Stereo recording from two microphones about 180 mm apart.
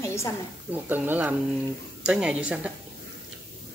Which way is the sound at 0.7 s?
10° right (ahead or behind).